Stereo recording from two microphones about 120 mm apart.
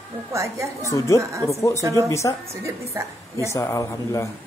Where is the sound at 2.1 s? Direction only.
25° left (ahead or behind).